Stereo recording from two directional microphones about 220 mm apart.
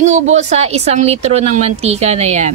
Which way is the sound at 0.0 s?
30° right (ahead or behind).